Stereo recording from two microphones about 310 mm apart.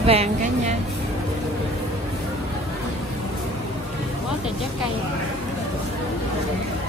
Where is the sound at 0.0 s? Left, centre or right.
Centre.